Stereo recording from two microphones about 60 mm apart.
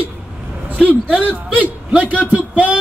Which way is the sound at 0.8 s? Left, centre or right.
Right.